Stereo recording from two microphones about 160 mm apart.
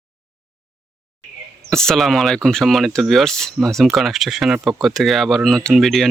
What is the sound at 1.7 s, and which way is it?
Speech, 5° left (ahead or behind).